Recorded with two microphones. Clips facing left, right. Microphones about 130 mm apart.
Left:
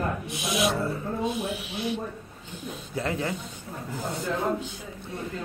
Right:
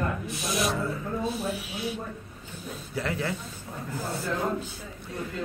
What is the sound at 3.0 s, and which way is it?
Speech, 20° left (ahead or behind).